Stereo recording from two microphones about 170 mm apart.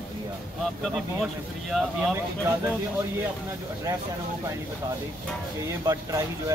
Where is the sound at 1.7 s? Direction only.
Centre (ahead or behind).